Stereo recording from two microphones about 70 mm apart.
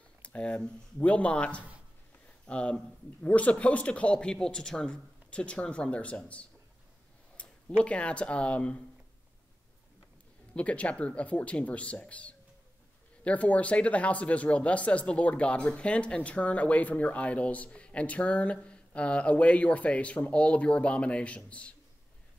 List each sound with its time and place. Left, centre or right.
0.2 s speech: centre
10.5 s speech: centre